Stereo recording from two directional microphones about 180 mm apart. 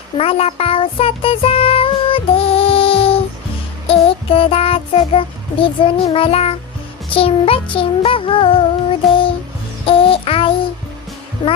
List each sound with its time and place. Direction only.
0.2 s music: 30° left (ahead or behind)
3.8 s child singing: 30° left (ahead or behind)
7.1 s music: 30° left (ahead or behind)